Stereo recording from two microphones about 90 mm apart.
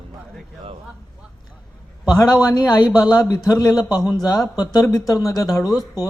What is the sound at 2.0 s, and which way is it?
A man's voice, 50° left (ahead or behind).